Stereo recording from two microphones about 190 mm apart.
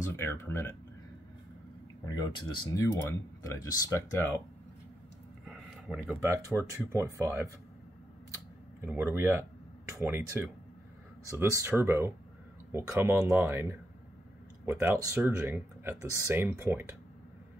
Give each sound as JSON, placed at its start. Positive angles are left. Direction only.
{"t": 0.1, "sound": "speech", "side_deg": 10}
{"t": 2.0, "sound": "speech", "side_deg": 20}
{"t": 5.4, "sound": "speech", "side_deg": 0}
{"t": 8.8, "sound": "speech", "side_deg": -10}